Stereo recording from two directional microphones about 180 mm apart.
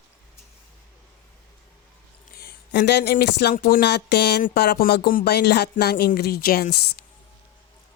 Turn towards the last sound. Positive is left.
turn(degrees=60)  # may be behind; listen again after turning